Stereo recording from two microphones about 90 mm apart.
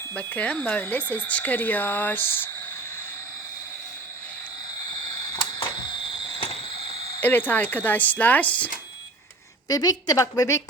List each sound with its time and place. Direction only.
0.1 s speech: 15° left (ahead or behind)
5.4 s a sound: 60° left (ahead or behind); by 6.6 s 80° left
7.2 s speech: 20° left (ahead or behind)
9.6 s a woman's voice: 45° left (ahead or behind)